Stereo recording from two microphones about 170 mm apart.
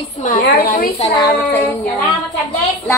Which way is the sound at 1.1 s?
15° left (ahead or behind).